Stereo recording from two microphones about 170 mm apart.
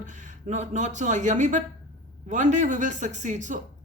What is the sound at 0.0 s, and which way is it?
Speech, 45° right (ahead or behind).